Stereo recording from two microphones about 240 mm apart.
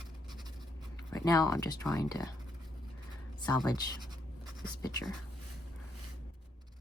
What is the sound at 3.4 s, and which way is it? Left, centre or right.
Speech, centre.